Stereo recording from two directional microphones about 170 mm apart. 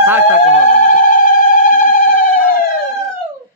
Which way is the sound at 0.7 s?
55° left (ahead or behind).